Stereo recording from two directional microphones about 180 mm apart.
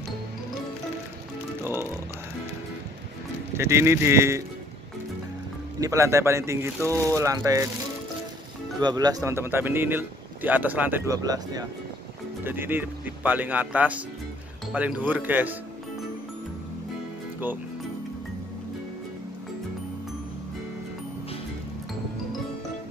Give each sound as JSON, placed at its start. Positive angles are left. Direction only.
{"t": 1.6, "sound": "music", "side_deg": -15}
{"t": 3.5, "sound": "speech", "side_deg": -15}
{"t": 5.8, "sound": "speech", "side_deg": -15}
{"t": 8.8, "sound": "speech", "side_deg": -20}